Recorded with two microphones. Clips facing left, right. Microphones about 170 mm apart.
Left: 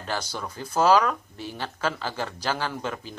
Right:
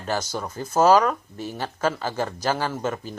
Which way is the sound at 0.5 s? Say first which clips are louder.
Right 3 dB; 45° right (ahead or behind).